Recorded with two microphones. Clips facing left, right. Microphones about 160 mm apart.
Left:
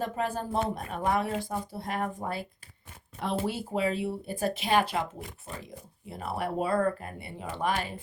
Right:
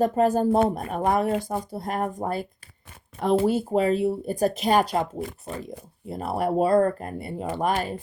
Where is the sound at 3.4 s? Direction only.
45° right (ahead or behind).